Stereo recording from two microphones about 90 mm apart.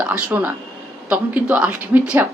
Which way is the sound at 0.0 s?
15° right (ahead or behind).